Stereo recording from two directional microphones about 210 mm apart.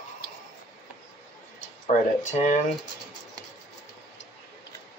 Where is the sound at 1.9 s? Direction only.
35° left (ahead or behind).